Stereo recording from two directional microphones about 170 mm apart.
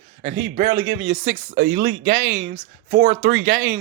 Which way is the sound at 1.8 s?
45° right (ahead or behind).